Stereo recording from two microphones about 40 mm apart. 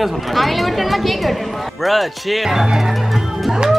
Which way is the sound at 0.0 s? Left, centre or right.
Centre.